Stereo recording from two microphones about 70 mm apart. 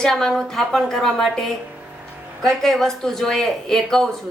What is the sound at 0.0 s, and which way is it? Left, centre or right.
Speech, centre.